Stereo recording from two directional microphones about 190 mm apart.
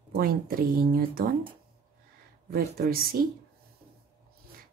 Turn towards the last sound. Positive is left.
turn(degrees=-50)  # may be behind; listen again after turning